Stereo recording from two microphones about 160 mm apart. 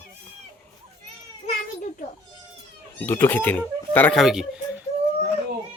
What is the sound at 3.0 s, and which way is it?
Speech, 10° left (ahead or behind).